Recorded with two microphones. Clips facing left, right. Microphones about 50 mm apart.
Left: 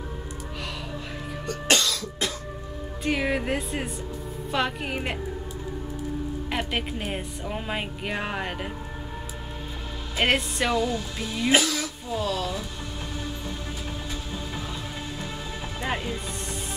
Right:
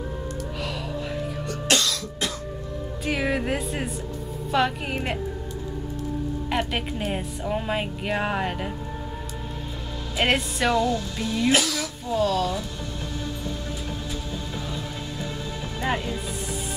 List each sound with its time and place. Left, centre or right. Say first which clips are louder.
1.7 s cough: even; centre
3.1 s speech: even; centre
6.5 s speech: right 2 dB; centre
10.1 s speech: even; centre
11.5 s speech: left 1 dB; left
12.1 s speech: right 5 dB; centre
15.8 s music: right 3 dB; centre